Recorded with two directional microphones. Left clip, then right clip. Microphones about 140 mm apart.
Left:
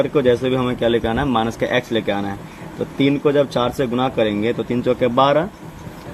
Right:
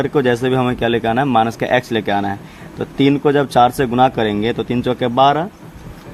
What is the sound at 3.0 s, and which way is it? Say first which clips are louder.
Speech: right 2 dB; 90° right.